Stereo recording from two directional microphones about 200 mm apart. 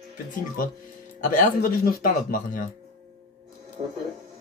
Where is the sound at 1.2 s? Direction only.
40° left (ahead or behind).